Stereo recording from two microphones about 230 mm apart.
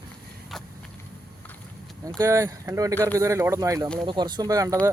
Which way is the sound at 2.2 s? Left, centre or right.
Centre.